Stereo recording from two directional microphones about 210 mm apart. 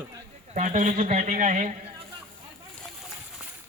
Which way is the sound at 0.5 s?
35° right (ahead or behind).